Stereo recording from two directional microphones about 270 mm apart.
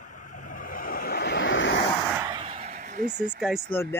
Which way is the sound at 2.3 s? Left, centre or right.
Right.